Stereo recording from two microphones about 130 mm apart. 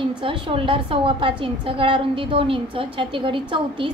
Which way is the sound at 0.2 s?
45° right (ahead or behind).